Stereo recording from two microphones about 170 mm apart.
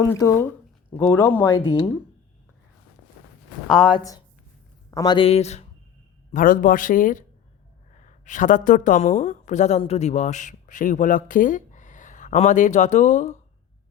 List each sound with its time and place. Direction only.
0.0 s speech: 20° left (ahead or behind)
1.5 s speech: 30° left (ahead or behind)
3.8 s speech: 25° left (ahead or behind); by 5.6 s 40° left (ahead or behind)
6.3 s speech: 55° left (ahead or behind)